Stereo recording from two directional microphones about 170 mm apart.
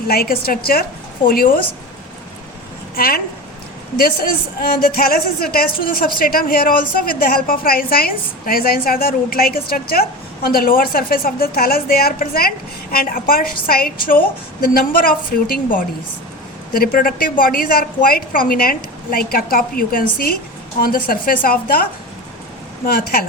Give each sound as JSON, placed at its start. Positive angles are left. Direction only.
{"t": 0.1, "sound": "a woman's voice", "side_deg": 65}
{"t": 2.9, "sound": "a woman's voice", "side_deg": 60}
{"t": 4.6, "sound": "a woman's voice", "side_deg": 65}
{"t": 22.9, "sound": "a woman's voice", "side_deg": 60}